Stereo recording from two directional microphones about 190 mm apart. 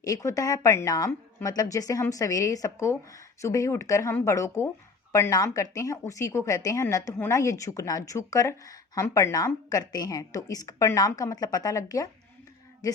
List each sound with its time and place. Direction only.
0.0 s speech: 15° left (ahead or behind)